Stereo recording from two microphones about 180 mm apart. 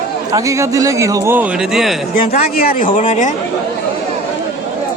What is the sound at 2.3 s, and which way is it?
Speech, 50° left (ahead or behind).